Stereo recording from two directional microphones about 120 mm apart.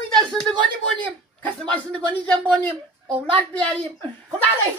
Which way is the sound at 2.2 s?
10° left (ahead or behind).